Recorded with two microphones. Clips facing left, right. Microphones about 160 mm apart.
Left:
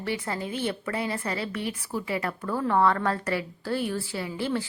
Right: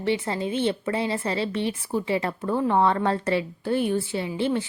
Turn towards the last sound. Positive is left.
turn(degrees=-20)  # may be behind; listen again after turning